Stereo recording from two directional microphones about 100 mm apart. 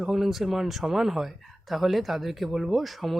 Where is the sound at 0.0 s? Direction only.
5° right (ahead or behind).